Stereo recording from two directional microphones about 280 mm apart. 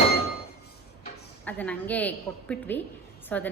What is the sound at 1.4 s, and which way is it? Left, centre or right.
A woman's voice, centre.